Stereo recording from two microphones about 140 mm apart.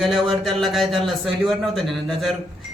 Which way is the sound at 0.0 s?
Centre (ahead or behind).